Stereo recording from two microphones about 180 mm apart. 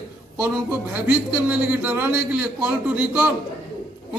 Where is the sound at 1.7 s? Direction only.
10° right (ahead or behind).